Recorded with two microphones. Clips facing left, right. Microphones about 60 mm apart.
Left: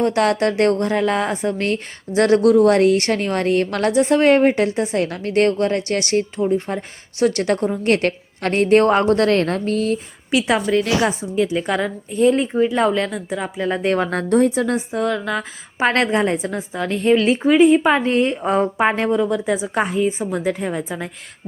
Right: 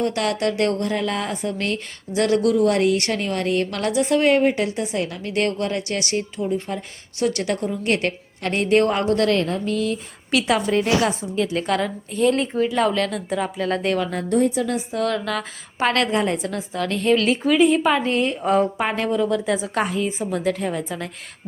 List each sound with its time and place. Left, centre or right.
0.0 s a woman's voice: left
10.3 s a woman's voice: left
13.8 s a woman's voice: left
14.1 s a woman's voice: left
14.9 s a woman's voice: centre
15.9 s a woman's voice: left